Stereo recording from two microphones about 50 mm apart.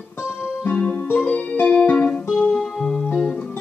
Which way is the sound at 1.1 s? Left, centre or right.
Left.